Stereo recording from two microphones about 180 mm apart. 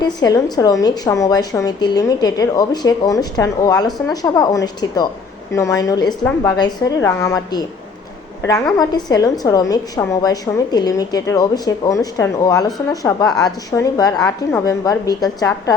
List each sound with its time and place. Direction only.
0.0 s a woman's voice: 20° left (ahead or behind)